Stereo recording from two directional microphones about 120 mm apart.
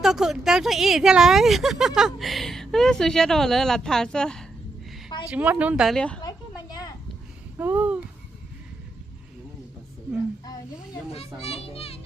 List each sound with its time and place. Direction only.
0.0 s speech: 5° right (ahead or behind)
5.3 s speech: 10° right (ahead or behind)
5.9 s speech: 5° left (ahead or behind)
6.2 s a sound: 35° left (ahead or behind)
7.5 s a sound: 15° right (ahead or behind)
11.3 s a child's voice: 55° left (ahead or behind)